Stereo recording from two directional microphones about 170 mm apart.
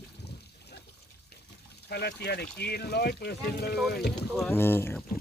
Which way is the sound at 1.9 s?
75° left (ahead or behind).